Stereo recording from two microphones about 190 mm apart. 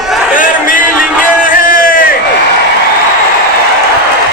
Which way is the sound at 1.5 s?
45° left (ahead or behind).